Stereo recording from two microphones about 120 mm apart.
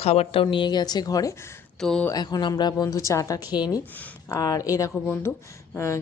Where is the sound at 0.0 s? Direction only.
60° left (ahead or behind).